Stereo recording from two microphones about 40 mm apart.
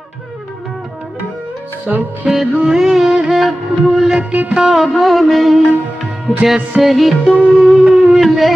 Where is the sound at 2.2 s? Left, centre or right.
Centre.